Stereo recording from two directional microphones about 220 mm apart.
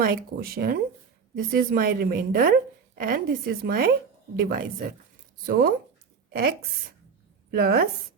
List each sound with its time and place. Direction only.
0.0 s a woman's voice: 45° right (ahead or behind)
7.5 s speech: 45° right (ahead or behind)